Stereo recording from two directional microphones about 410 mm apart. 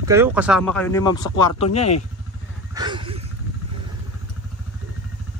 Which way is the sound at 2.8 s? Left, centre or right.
Centre.